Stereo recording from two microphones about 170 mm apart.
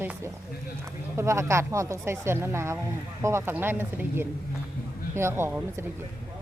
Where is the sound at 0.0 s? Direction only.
10° right (ahead or behind).